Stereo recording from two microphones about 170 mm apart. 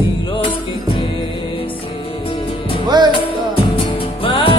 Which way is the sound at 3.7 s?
30° left (ahead or behind).